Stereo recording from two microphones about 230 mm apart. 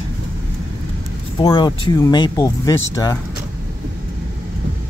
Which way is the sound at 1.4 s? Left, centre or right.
Left.